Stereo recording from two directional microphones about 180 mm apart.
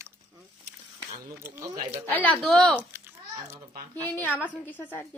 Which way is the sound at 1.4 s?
15° right (ahead or behind).